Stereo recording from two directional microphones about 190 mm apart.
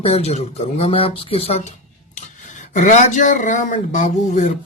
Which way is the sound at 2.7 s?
40° left (ahead or behind).